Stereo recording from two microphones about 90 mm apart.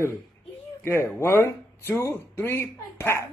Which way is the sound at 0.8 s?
30° left (ahead or behind).